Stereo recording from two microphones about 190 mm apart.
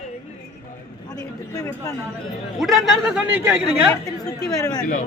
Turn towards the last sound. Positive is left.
turn(degrees=20)  # may be behind; listen again after turning